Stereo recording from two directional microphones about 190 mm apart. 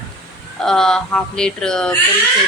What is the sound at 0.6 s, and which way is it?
A woman's voice, 5° left (ahead or behind).